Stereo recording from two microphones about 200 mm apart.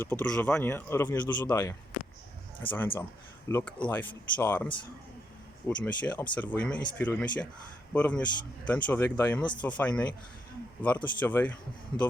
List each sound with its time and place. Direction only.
0.0 s speech: 10° left (ahead or behind)
9.4 s speech: 20° left (ahead or behind)
9.6 s speech: 5° left (ahead or behind)